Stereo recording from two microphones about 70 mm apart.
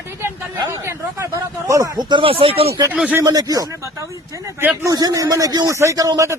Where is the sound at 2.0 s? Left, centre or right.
Right.